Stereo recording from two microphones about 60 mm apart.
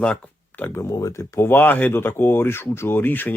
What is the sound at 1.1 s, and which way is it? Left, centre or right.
Speech, left.